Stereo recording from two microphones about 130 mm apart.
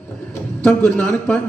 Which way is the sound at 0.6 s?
10° left (ahead or behind).